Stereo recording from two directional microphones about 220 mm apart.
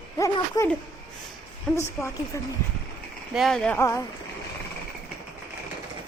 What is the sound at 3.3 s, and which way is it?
Speech, centre (ahead or behind).